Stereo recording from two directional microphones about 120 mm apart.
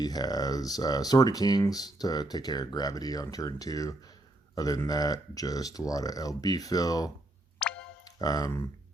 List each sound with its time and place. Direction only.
0.0 s speech: 35° left (ahead or behind)
7.6 s music: 10° left (ahead or behind)
8.0 s speech: 30° left (ahead or behind)